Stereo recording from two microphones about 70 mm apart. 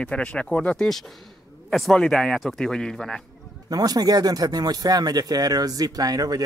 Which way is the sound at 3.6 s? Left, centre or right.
Right.